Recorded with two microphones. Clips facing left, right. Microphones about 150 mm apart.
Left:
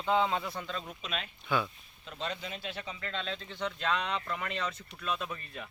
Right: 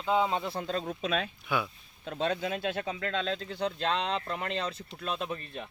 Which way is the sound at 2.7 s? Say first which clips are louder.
Right 7 dB; 55° right (ahead or behind).